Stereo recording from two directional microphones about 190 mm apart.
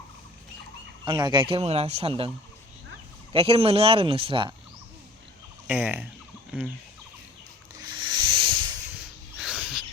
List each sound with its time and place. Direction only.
1.0 s speech: 25° right (ahead or behind)
3.3 s speech: 30° right (ahead or behind)
5.6 s speech: 10° right (ahead or behind)
7.8 s rub: 25° right (ahead or behind)
9.0 s a sound: 5° right (ahead or behind)